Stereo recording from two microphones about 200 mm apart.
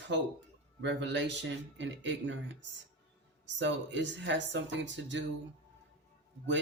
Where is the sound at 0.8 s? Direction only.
60° right (ahead or behind).